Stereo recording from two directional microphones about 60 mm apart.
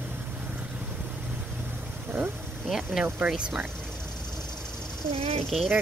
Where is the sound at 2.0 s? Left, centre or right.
Right.